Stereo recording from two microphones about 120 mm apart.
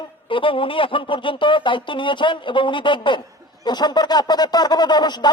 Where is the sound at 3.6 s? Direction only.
35° left (ahead or behind).